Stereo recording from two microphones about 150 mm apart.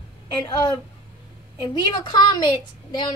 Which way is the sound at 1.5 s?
30° left (ahead or behind).